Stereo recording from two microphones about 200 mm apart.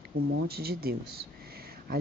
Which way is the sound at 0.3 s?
55° right (ahead or behind).